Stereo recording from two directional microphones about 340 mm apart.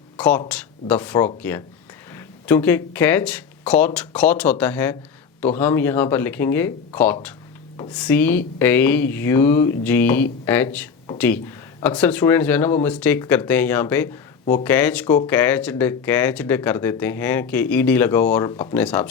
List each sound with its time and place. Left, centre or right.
0.2 s speech: centre